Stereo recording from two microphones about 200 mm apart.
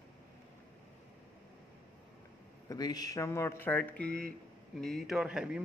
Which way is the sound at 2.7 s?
20° left (ahead or behind).